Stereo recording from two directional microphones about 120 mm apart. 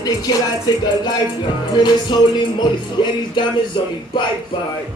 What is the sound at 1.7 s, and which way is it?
Music, 40° left (ahead or behind).